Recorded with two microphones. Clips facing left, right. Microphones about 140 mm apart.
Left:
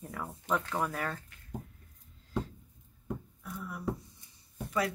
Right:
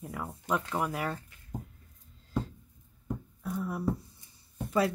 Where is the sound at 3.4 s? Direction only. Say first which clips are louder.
Right 8 dB; 35° right (ahead or behind).